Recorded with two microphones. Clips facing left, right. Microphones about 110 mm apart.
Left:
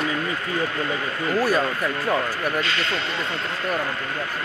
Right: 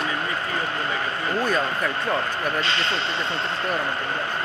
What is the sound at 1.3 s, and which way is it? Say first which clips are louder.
Speech: left 3 dB; 10° left (ahead or behind).